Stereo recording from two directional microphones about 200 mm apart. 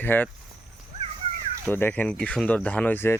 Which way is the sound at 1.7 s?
10° left (ahead or behind).